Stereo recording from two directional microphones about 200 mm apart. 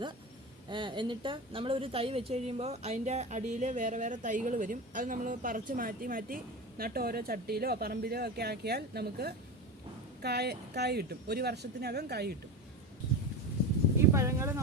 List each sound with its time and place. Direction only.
0.7 s a woman's voice: 25° right (ahead or behind); by 12.4 s 55° right (ahead or behind)
14.1 s speech: 15° right (ahead or behind)